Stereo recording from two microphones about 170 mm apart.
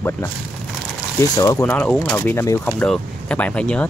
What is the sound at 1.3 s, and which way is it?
Speech, 20° left (ahead or behind).